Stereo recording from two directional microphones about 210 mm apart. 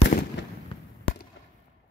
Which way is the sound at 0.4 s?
60° left (ahead or behind).